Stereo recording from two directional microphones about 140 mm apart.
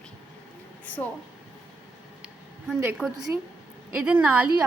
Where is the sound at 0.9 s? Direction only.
10° left (ahead or behind).